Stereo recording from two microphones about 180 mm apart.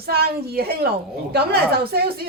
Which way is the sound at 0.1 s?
60° right (ahead or behind).